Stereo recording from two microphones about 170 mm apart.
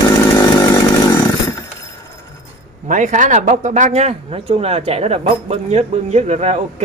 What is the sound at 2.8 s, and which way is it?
Speech, 45° right (ahead or behind).